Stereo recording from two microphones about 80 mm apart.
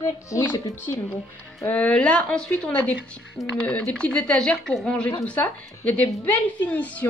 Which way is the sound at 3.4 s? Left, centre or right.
Centre.